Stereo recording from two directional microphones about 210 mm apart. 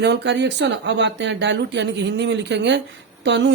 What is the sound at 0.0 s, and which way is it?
A woman's voice, 55° right (ahead or behind).